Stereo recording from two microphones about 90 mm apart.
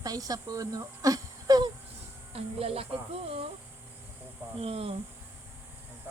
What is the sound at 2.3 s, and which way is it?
Speech, 90° right.